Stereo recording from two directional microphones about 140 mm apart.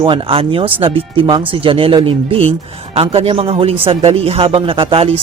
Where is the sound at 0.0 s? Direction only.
40° right (ahead or behind).